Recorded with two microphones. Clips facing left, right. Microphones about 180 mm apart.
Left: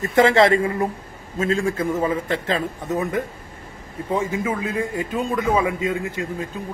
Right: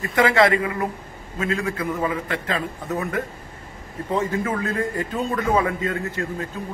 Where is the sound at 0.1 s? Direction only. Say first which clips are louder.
Left 3 dB; 25° left (ahead or behind).